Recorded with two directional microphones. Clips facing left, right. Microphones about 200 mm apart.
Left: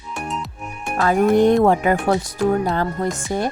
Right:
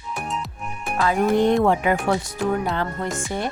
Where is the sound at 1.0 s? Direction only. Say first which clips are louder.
Left 4 dB; 45° left (ahead or behind).